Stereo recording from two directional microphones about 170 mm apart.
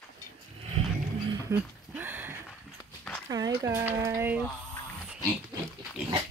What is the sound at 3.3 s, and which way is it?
Speech, 20° right (ahead or behind).